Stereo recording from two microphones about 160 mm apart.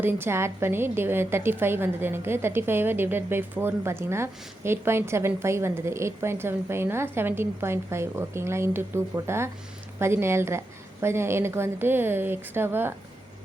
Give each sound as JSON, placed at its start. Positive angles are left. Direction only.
{"t": 0.0, "sound": "a woman's voice", "side_deg": -15}